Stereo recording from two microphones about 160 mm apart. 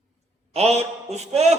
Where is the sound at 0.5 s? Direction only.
40° right (ahead or behind).